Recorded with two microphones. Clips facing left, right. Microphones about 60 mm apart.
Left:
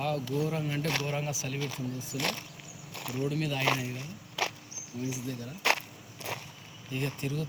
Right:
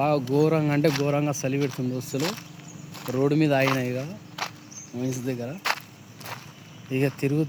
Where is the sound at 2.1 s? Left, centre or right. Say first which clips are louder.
Right 6 dB; right.